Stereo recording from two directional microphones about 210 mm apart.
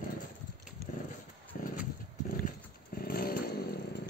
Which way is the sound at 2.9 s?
45° left (ahead or behind).